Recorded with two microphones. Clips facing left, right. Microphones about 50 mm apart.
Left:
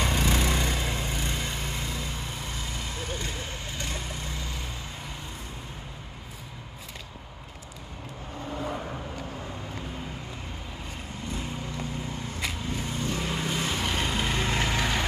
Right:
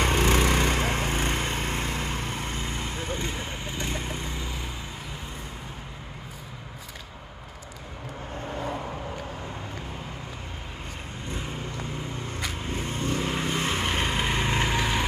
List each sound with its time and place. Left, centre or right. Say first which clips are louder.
0.0 s lawn mower: right 4 dB; right
3.6 s vehicle: right 3 dB; right
12.7 s vehicle: right 2 dB; right; by 15.0 s centre